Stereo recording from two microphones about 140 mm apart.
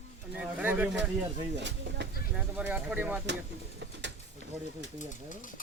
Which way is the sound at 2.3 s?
10° right (ahead or behind).